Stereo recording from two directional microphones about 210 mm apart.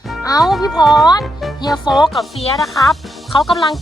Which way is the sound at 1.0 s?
20° left (ahead or behind).